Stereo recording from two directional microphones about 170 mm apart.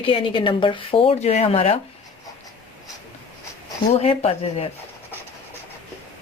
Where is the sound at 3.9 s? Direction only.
40° left (ahead or behind).